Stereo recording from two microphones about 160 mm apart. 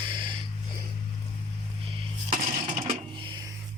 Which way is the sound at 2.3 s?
35° right (ahead or behind).